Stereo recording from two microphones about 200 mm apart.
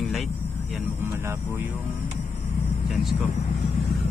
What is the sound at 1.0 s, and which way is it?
Vehicle, 15° right (ahead or behind).